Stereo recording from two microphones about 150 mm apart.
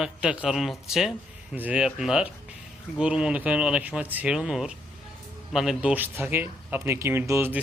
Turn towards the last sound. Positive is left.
turn(degrees=-15)  # may be behind; listen again after turning